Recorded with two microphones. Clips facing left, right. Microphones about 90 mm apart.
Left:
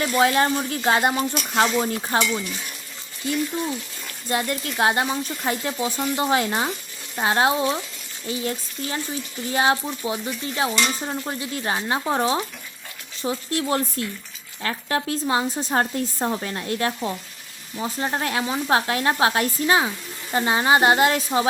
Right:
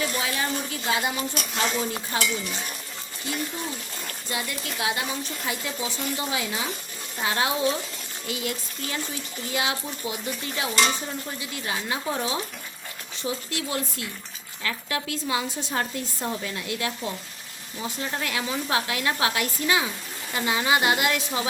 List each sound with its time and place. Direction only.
0.0 s speech: 50° left (ahead or behind)
4.3 s speech: 45° left (ahead or behind)
7.2 s a woman's voice: 35° left (ahead or behind)